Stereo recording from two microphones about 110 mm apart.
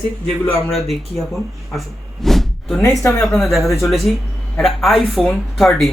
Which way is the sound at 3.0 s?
25° left (ahead or behind).